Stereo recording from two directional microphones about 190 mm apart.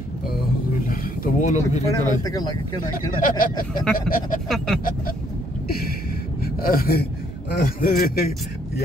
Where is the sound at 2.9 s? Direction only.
45° left (ahead or behind).